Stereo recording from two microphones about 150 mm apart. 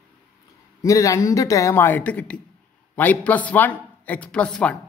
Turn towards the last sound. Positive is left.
turn(degrees=5)  # may be behind; listen again after turning